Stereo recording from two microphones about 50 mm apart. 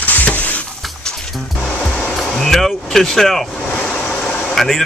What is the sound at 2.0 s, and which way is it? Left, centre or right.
Vehicle, centre.